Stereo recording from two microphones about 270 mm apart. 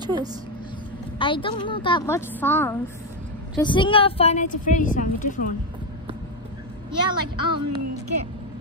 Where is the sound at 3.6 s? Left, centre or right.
Centre.